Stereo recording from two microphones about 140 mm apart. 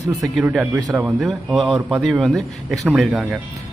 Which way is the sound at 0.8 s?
25° right (ahead or behind).